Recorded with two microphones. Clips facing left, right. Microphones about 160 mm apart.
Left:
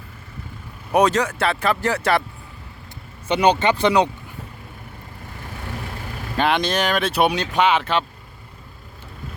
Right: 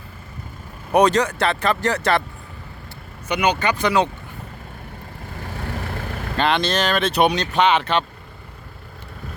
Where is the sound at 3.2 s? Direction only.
30° left (ahead or behind).